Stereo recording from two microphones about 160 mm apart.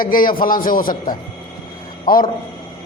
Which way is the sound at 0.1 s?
60° left (ahead or behind).